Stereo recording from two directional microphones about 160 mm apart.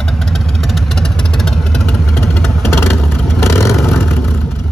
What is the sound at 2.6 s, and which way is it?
Vehicle, 15° left (ahead or behind).